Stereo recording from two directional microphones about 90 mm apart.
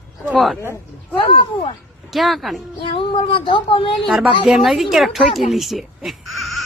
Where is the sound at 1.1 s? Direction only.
65° left (ahead or behind).